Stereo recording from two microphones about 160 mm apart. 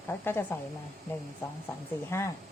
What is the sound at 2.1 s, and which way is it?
Speech, 15° left (ahead or behind).